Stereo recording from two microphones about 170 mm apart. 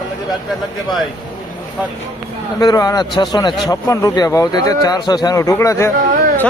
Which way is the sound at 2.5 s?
20° left (ahead or behind).